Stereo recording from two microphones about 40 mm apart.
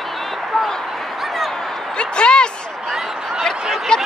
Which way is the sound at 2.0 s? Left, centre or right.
Left.